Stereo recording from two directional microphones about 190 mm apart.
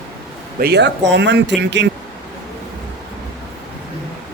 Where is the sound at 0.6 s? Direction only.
60° right (ahead or behind).